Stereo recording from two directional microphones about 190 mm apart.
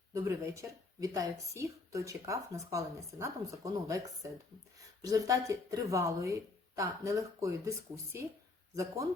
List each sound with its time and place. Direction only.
0.1 s a woman's voice: 15° right (ahead or behind)
8.7 s a woman's voice: 15° right (ahead or behind)